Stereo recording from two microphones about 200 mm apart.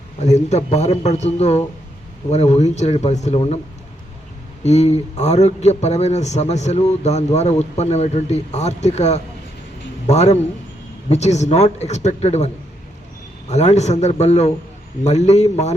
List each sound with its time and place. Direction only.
0.2 s a man's voice: 35° left (ahead or behind)
4.6 s a man's voice: 35° left (ahead or behind)
13.5 s a man's voice: 35° left (ahead or behind)